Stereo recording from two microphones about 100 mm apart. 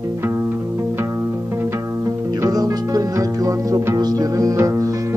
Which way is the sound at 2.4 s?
40° right (ahead or behind).